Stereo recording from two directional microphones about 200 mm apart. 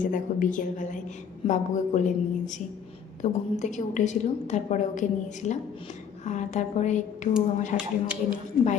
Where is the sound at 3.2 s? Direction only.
35° left (ahead or behind).